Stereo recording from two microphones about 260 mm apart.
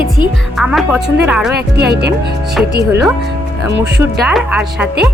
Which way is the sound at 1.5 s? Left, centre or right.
Right.